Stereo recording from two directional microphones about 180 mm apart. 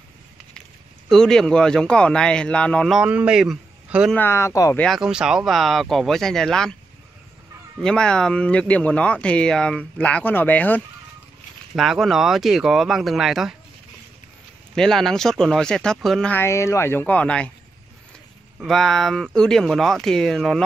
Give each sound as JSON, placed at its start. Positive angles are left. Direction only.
{"t": 0.6, "sound": "speech", "side_deg": 5}
{"t": 4.2, "sound": "speech", "side_deg": 15}
{"t": 4.8, "sound": "speech", "side_deg": 0}
{"t": 7.8, "sound": "speech", "side_deg": 5}
{"t": 11.7, "sound": "speech", "side_deg": 0}
{"t": 14.8, "sound": "speech", "side_deg": 0}
{"t": 18.6, "sound": "speech", "side_deg": 0}